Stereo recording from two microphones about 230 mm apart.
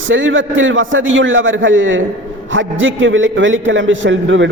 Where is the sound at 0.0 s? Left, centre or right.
Right.